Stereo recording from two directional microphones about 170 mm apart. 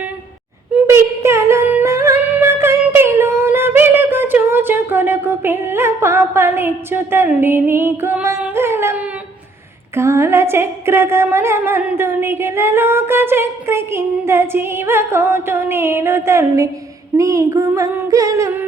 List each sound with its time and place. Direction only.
0.8 s singing: 15° right (ahead or behind)
9.9 s a woman's voice: 15° right (ahead or behind)